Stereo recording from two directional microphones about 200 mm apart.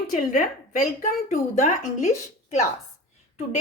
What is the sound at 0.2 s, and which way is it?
Speech, 40° left (ahead or behind).